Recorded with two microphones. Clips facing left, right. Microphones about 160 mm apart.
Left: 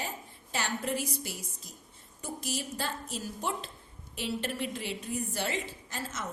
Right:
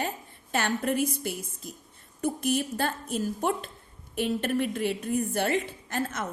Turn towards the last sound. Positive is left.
turn(degrees=-55)  # may be behind; listen again after turning